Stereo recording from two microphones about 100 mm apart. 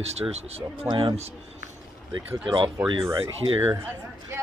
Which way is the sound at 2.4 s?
55° right (ahead or behind).